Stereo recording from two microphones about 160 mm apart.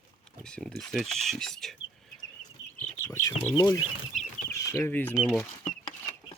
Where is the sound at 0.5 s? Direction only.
5° left (ahead or behind).